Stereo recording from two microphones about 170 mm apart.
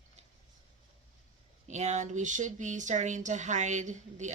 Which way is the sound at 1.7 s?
45° right (ahead or behind).